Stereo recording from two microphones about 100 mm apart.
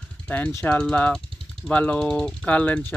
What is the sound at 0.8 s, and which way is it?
Speech, 15° left (ahead or behind).